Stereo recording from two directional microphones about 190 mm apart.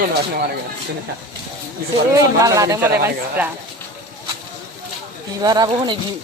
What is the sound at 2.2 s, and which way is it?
Speech, 20° right (ahead or behind).